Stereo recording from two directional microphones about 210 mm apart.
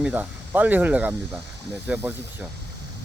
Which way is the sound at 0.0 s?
10° right (ahead or behind).